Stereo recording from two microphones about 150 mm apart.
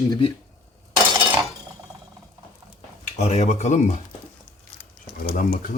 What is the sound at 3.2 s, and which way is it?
Speech, 50° left (ahead or behind).